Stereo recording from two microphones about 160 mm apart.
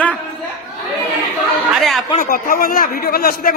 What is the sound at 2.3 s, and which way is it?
A man's voice, 65° left (ahead or behind).